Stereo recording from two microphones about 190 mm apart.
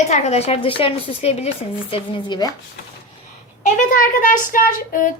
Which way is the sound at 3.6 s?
40° left (ahead or behind).